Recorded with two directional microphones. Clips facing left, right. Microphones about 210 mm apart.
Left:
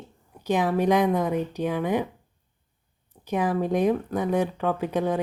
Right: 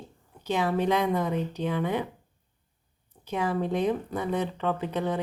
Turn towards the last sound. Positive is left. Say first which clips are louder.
# left 4 dB
turn(degrees=15)  # may be behind; listen again after turning